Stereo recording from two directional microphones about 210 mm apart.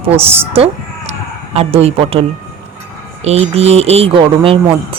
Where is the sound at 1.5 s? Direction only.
25° right (ahead or behind).